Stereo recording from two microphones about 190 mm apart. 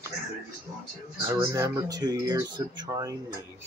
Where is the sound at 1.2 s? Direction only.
15° right (ahead or behind).